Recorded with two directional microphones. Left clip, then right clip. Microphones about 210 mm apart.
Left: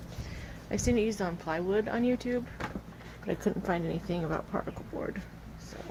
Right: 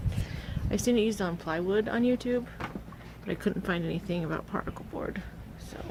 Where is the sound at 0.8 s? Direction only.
25° right (ahead or behind).